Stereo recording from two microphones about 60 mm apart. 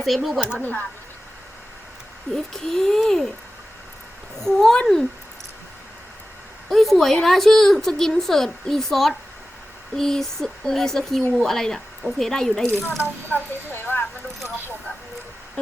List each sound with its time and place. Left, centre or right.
0.0 s a woman's voice: centre
0.6 s speech: left
2.3 s a woman's voice: centre
4.4 s speech: centre
6.7 s a woman's voice: centre
11.2 s speech: left
11.4 s speech: centre
13.0 s speech: left